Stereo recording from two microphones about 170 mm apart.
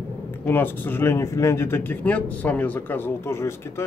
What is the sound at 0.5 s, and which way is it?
Speech, 10° left (ahead or behind).